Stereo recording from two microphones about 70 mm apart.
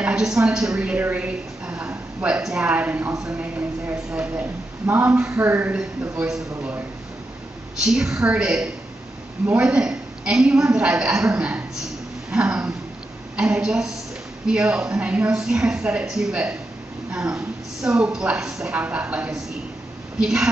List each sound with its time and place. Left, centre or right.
0.0 s a woman's voice: centre; by 5.7 s right
5.7 s a woman's voice: centre
7.8 s a woman's voice: centre
15.3 s a woman's voice: centre
20.2 s a woman's voice: centre